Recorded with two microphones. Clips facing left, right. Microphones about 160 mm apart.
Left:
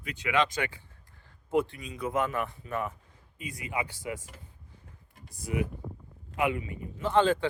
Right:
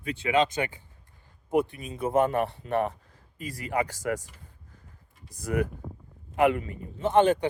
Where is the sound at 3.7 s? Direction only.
40° right (ahead or behind).